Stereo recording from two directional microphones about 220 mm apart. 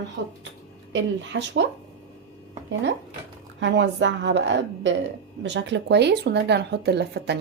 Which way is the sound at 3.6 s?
55° right (ahead or behind).